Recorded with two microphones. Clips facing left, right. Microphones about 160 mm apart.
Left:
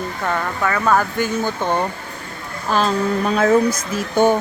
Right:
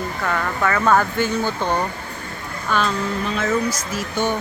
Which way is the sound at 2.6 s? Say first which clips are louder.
Left 4 dB; 35° left (ahead or behind).